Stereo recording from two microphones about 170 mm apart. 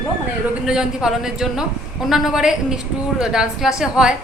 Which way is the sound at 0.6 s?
5° right (ahead or behind).